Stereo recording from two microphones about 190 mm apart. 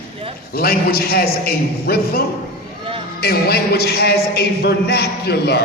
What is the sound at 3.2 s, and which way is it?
A man's voice, 55° left (ahead or behind).